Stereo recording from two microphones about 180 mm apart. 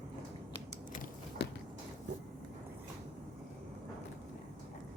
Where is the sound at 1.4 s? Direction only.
70° left (ahead or behind).